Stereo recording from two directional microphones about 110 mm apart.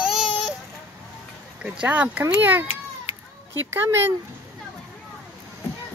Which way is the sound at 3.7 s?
20° right (ahead or behind).